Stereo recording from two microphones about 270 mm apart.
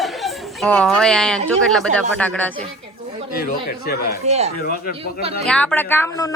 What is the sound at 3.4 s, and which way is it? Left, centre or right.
Speech, left.